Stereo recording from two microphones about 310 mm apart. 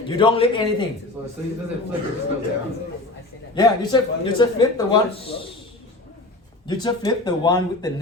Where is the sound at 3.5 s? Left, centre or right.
Centre.